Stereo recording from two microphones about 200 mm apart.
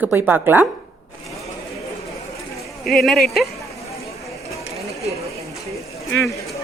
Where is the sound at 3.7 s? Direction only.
15° left (ahead or behind).